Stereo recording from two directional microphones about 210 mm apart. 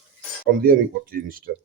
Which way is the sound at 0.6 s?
45° right (ahead or behind).